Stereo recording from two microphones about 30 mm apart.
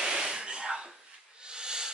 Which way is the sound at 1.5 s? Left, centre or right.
Right.